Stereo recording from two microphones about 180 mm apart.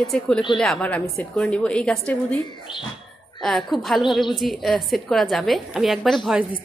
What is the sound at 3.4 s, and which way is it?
A woman's voice, centre (ahead or behind).